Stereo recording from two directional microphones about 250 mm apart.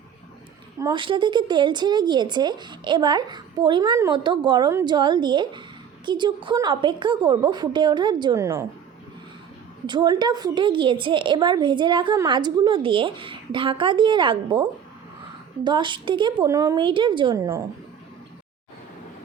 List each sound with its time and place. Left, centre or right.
0.8 s a woman's voice: centre
9.8 s a woman's voice: centre